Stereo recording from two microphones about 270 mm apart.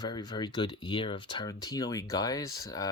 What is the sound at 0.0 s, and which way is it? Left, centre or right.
Speech, centre.